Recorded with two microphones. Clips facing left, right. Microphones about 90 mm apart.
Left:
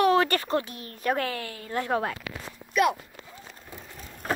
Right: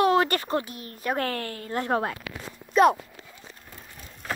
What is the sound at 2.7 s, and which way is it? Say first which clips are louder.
Clip-clop: right 5 dB; 35° right (ahead or behind).